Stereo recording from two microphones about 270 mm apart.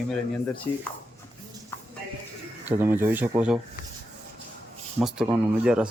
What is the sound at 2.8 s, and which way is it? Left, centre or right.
Speech, centre.